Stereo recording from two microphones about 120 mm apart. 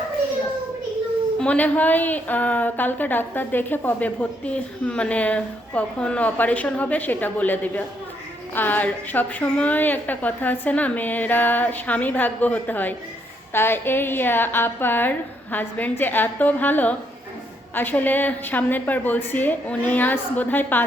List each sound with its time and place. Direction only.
1.4 s a woman's voice: 10° left (ahead or behind)